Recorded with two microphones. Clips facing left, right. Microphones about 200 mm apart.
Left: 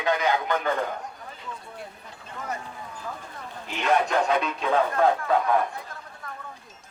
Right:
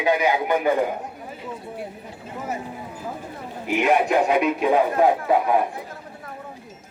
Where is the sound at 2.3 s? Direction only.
5° right (ahead or behind).